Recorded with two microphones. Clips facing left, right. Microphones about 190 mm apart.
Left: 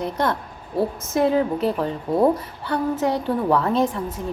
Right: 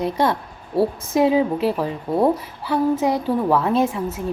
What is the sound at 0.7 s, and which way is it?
A woman's voice, 15° right (ahead or behind).